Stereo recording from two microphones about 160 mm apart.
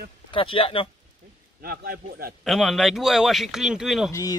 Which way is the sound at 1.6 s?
70° right (ahead or behind).